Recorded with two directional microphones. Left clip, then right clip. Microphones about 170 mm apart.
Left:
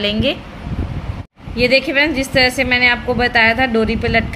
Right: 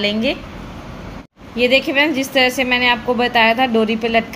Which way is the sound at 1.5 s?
10° left (ahead or behind).